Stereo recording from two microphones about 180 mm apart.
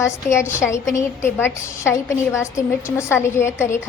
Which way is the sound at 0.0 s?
15° left (ahead or behind).